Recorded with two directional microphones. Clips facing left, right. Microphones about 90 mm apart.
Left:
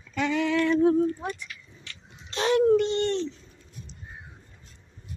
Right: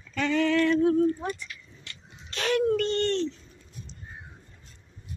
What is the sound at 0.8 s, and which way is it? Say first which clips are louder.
Speech: left 1 dB; 25° left (ahead or behind).